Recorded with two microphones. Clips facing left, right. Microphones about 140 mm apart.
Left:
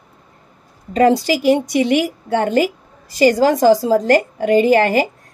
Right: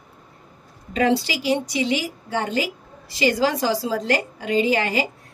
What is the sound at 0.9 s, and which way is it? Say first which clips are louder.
A woman's voice: left 7 dB; 45° left (ahead or behind).